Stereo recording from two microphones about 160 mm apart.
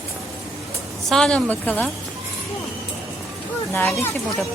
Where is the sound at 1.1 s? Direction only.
5° left (ahead or behind).